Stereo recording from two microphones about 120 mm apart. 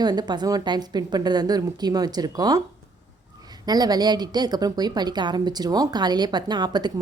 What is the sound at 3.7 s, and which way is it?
A woman's voice, 35° right (ahead or behind).